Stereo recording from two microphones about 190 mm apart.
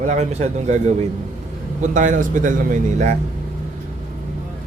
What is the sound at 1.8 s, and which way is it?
A man's voice, 40° right (ahead or behind).